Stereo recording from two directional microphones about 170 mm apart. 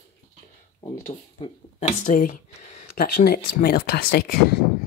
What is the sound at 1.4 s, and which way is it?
Speech, 35° left (ahead or behind).